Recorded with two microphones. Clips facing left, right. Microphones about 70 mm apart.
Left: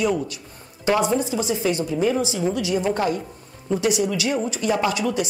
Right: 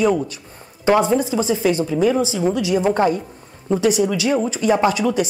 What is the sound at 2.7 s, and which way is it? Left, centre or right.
A woman's voice, right.